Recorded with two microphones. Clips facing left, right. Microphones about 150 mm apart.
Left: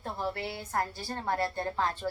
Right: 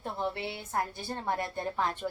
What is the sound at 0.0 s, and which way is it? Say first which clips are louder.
A woman's voice: even; 20° right (ahead or behind).